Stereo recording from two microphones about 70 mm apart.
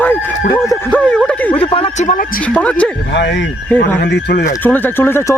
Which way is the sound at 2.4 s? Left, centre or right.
Centre.